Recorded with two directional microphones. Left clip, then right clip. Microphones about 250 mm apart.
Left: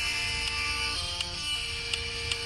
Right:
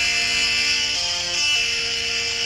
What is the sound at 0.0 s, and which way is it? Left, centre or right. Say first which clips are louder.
Music: right 10 dB; right.